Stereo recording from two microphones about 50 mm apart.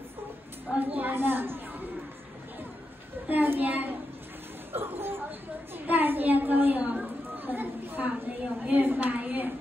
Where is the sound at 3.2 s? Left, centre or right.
Right.